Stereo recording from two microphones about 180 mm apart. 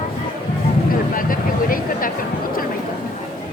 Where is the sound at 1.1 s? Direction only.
50° left (ahead or behind).